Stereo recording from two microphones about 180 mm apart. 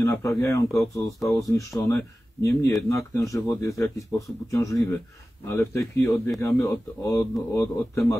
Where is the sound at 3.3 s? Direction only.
15° left (ahead or behind).